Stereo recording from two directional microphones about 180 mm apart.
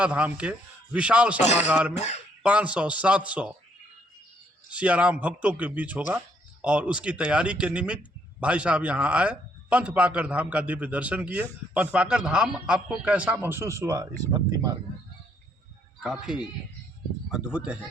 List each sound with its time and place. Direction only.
0.0 s speech: 5° right (ahead or behind)
2.0 s speech: 40° left (ahead or behind)
2.4 s speech: 5° right (ahead or behind)
4.7 s speech: 5° right (ahead or behind)
16.0 s speech: 5° right (ahead or behind)